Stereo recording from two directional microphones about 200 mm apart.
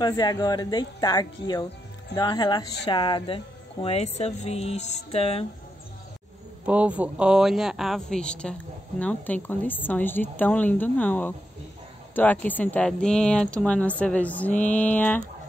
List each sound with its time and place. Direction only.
0.0 s speech: 20° left (ahead or behind)
6.6 s speech: 5° right (ahead or behind)